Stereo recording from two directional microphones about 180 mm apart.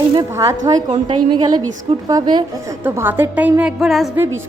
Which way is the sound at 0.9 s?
30° right (ahead or behind).